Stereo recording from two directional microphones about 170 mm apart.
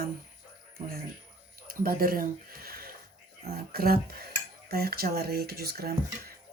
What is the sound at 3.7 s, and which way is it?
Speech, 60° right (ahead or behind).